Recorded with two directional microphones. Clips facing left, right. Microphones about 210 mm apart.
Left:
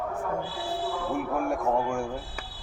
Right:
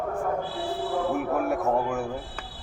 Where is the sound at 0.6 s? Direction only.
55° right (ahead or behind).